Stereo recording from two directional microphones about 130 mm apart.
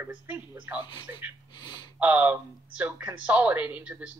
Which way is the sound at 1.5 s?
35° left (ahead or behind).